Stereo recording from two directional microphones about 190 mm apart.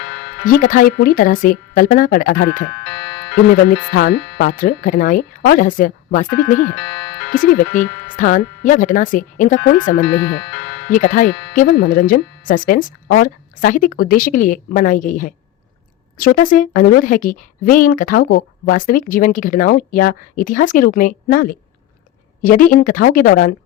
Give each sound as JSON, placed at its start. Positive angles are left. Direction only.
{"t": 0.0, "sound": "music", "side_deg": 75}
{"t": 0.4, "sound": "a woman's voice", "side_deg": 45}
{"t": 2.8, "sound": "music", "side_deg": 75}
{"t": 3.5, "sound": "a woman's voice", "side_deg": 50}
{"t": 6.7, "sound": "music", "side_deg": 75}
{"t": 7.3, "sound": "a woman's voice", "side_deg": 45}
{"t": 10.0, "sound": "speech", "side_deg": 65}
{"t": 10.8, "sound": "a woman's voice", "side_deg": 45}